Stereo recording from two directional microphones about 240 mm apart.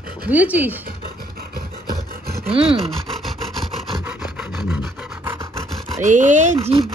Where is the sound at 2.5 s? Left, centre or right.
Right.